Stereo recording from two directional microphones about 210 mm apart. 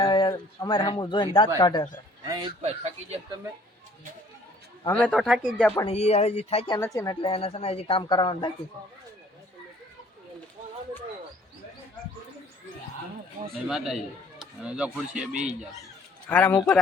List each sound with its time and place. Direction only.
0.0 s a woman's voice: 25° left (ahead or behind)
2.2 s speech: 20° right (ahead or behind)
2.6 s speech: 30° right (ahead or behind)
5.0 s speech: centre (ahead or behind)
5.8 s a woman's voice: 30° left (ahead or behind)
6.7 s a woman's voice: 15° left (ahead or behind)
13.7 s a man's voice: centre (ahead or behind)
16.3 s speech: 10° left (ahead or behind)